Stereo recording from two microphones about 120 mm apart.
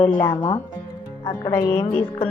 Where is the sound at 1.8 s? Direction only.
50° left (ahead or behind).